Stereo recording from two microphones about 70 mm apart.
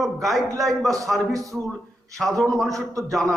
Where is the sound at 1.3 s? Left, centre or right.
Right.